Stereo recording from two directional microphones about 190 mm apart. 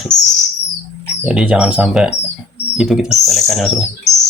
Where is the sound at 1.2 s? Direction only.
5° right (ahead or behind).